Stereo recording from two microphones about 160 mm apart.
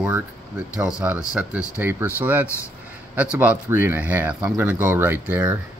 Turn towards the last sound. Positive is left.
turn(degrees=-10)  # may be behind; listen again after turning